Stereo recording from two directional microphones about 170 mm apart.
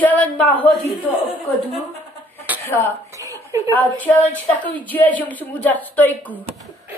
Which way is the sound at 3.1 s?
20° right (ahead or behind).